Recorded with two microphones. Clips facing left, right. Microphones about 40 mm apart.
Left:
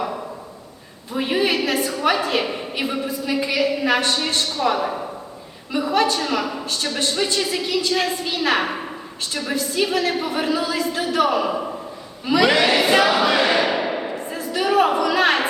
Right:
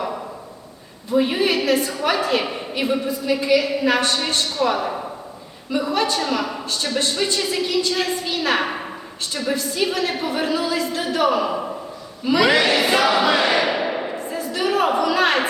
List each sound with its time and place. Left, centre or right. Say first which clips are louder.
1.1 s a woman's voice: right 2 dB; centre
12.2 s music: even; centre